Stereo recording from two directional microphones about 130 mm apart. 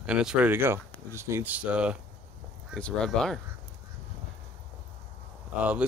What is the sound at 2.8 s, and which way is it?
Speech, 5° left (ahead or behind).